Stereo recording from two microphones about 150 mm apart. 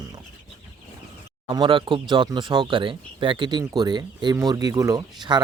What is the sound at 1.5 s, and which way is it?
Speech, 30° right (ahead or behind).